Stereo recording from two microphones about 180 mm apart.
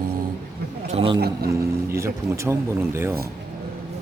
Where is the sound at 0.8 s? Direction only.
35° right (ahead or behind).